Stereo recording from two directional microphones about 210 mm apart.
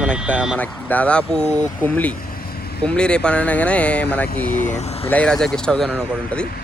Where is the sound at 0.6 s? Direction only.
5° left (ahead or behind).